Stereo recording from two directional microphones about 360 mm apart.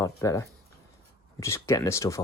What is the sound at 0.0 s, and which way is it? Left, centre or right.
Speech, centre.